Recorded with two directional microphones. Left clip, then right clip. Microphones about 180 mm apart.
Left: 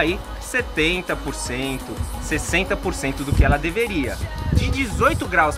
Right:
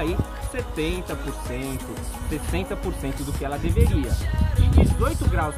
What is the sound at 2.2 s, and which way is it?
Speech, 5° left (ahead or behind).